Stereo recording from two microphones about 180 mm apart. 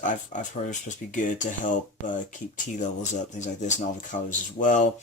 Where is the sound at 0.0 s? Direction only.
45° left (ahead or behind).